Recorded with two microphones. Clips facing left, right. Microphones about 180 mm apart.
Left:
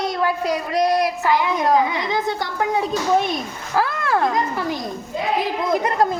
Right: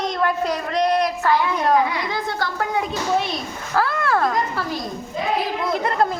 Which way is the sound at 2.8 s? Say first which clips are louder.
Left 3 dB; 45° left (ahead or behind).